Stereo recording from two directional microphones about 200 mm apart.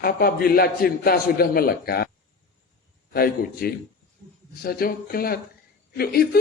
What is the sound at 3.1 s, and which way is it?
A man's voice, 50° left (ahead or behind).